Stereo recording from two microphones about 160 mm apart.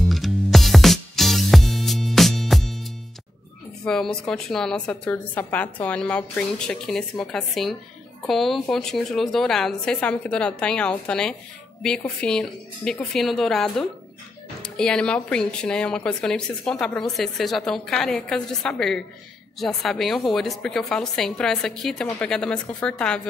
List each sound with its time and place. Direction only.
0.1 s music: centre (ahead or behind)
3.8 s speech: 5° left (ahead or behind)